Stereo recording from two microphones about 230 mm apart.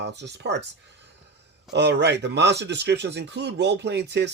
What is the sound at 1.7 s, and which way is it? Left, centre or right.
Speech, right.